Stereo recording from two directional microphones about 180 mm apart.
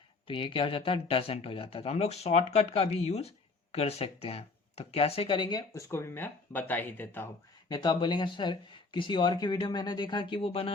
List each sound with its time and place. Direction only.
0.3 s speech: 30° left (ahead or behind); by 7.3 s 10° left (ahead or behind)
7.7 s speech: 25° left (ahead or behind)